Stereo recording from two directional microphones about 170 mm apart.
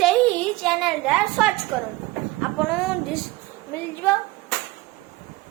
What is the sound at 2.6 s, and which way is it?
Speech, centre (ahead or behind).